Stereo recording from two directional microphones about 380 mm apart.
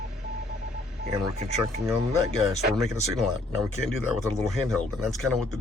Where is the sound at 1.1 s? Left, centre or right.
Centre.